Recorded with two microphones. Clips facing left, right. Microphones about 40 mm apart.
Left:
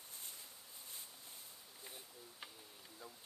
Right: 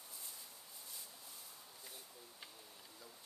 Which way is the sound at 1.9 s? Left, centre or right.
Left.